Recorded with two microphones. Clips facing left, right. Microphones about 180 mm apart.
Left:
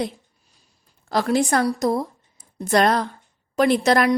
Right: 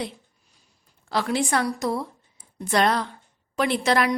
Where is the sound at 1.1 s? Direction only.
40° left (ahead or behind).